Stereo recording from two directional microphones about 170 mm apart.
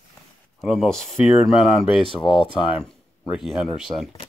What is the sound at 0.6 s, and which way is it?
Speech, centre (ahead or behind).